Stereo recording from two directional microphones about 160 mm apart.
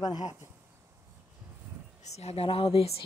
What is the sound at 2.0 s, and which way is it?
Speech, 40° left (ahead or behind).